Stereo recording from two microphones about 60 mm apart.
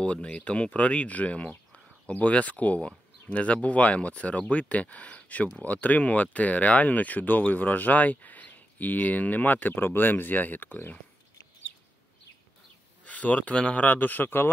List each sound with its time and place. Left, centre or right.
0.0 s speech: centre
13.0 s a man's voice: left